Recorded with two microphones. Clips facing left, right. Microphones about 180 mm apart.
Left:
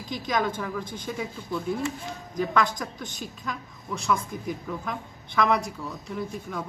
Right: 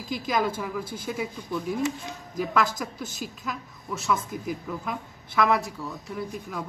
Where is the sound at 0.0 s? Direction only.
5° right (ahead or behind).